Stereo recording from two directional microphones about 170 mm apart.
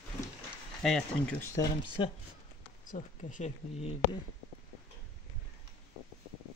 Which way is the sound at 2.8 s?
50° left (ahead or behind).